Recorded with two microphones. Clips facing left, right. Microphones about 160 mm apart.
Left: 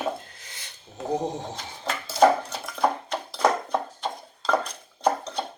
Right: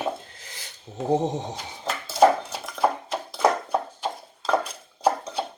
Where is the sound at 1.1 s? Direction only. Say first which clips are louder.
Right 4 dB; 20° right (ahead or behind).